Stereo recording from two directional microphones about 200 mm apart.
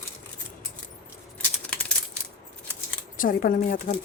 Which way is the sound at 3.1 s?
45° left (ahead or behind).